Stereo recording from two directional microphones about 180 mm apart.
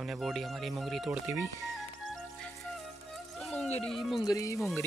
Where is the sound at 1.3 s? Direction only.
15° right (ahead or behind).